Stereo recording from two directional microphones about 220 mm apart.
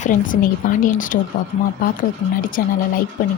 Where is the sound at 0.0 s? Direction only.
35° left (ahead or behind).